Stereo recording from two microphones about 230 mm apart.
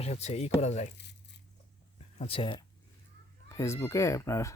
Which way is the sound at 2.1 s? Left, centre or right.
Left.